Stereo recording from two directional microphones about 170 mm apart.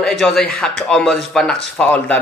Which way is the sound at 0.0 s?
Centre (ahead or behind).